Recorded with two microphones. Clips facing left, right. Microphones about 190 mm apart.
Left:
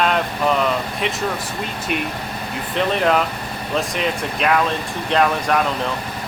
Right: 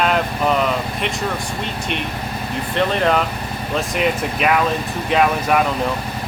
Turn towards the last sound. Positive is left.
turn(degrees=-5)  # may be behind; listen again after turning